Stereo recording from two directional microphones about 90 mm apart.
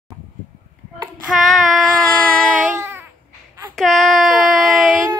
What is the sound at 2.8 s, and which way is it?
Baby cry, 30° right (ahead or behind).